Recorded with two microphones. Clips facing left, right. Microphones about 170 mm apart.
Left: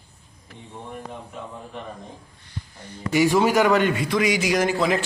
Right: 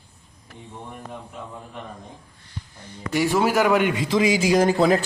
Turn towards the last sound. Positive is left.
turn(degrees=-40)  # may be behind; listen again after turning